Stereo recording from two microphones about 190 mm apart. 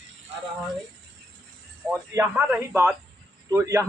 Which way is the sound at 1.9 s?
10° right (ahead or behind).